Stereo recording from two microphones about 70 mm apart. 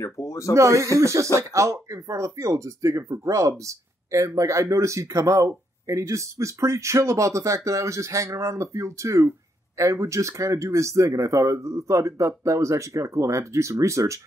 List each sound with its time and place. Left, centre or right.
0.0 s speech: left
0.6 s speech: right